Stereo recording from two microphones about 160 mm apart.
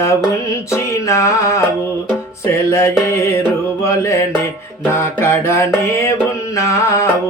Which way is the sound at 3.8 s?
20° left (ahead or behind).